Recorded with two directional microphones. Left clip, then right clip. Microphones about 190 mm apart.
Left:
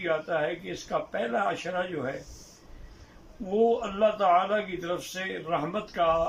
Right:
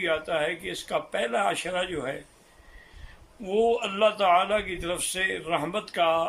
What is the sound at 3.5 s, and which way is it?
A man's voice, 15° right (ahead or behind).